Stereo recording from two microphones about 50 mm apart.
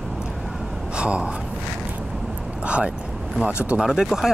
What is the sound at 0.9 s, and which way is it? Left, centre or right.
Speech, right.